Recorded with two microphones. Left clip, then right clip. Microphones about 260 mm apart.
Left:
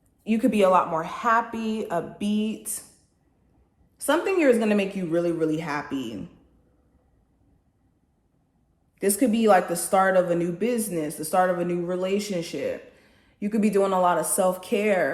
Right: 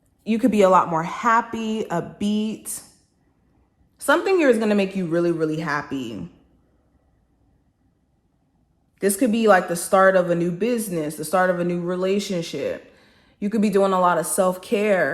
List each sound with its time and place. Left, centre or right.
0.3 s speech: right
3.9 s speech: right
9.0 s speech: right